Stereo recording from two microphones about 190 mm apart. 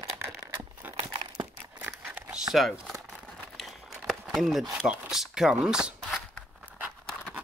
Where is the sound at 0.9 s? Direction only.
25° right (ahead or behind).